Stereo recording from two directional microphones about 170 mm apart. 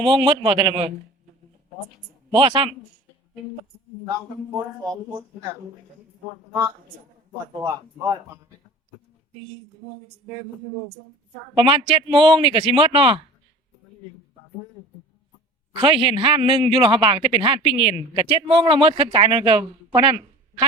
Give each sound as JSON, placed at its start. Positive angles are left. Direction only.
{"t": 0.0, "sound": "a man's voice", "side_deg": -30}
{"t": 2.3, "sound": "a man's voice", "side_deg": -30}
{"t": 7.6, "sound": "a man's voice", "side_deg": -20}
{"t": 11.5, "sound": "a man's voice", "side_deg": -30}
{"t": 15.7, "sound": "a man's voice", "side_deg": -30}